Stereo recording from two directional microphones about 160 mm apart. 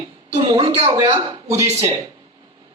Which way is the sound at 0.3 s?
35° right (ahead or behind).